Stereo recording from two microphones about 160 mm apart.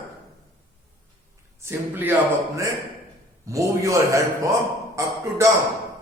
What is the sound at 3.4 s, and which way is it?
A man's voice, 20° right (ahead or behind).